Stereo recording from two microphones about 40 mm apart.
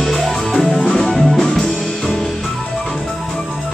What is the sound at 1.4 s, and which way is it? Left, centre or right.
Music, centre.